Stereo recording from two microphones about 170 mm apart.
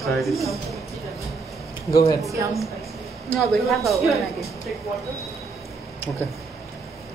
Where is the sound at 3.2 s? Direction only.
Centre (ahead or behind).